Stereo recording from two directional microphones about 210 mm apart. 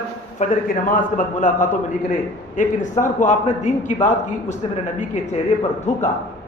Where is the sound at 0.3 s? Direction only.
40° left (ahead or behind).